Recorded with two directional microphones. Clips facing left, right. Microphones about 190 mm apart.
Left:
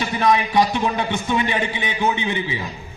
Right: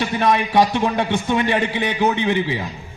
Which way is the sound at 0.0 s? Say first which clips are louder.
Even; 65° right (ahead or behind).